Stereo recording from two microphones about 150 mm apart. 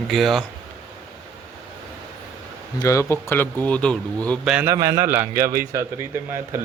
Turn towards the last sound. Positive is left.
turn(degrees=-15)  # may be behind; listen again after turning